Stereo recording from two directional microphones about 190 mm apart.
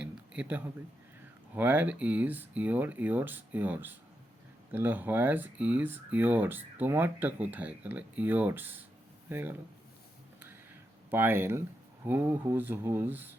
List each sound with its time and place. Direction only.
0.0 s a sound: 5° right (ahead or behind)
1.5 s speech: 10° right (ahead or behind)
11.1 s speech: 10° right (ahead or behind)